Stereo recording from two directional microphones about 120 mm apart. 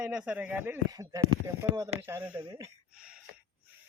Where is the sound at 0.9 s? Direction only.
30° right (ahead or behind); by 2.4 s 15° right (ahead or behind).